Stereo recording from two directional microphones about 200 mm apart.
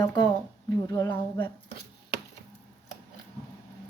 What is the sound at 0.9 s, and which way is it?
Speech, 15° left (ahead or behind).